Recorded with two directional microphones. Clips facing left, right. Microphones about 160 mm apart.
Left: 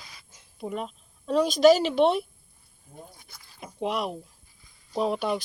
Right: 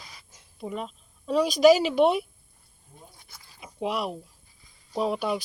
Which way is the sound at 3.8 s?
5° right (ahead or behind).